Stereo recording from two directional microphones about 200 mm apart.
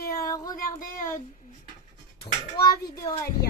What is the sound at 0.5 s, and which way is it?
Child singing, 45° left (ahead or behind).